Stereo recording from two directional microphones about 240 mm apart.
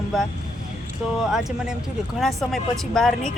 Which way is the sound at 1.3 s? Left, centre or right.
Centre.